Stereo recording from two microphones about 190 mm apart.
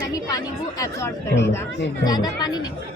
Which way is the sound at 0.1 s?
20° left (ahead or behind).